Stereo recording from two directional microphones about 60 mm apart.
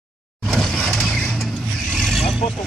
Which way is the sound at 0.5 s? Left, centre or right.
Centre.